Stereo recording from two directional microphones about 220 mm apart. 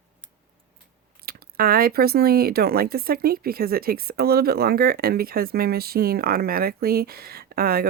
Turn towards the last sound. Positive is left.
turn(degrees=-45)  # may be behind; listen again after turning